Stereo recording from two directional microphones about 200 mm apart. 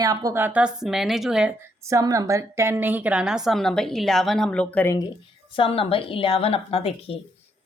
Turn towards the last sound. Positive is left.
turn(degrees=30)  # may be behind; listen again after turning